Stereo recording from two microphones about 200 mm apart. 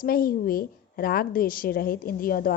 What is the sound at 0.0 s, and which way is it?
A woman's voice, 45° left (ahead or behind).